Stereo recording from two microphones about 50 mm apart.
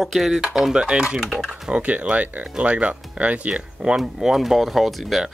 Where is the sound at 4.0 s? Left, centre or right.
Centre.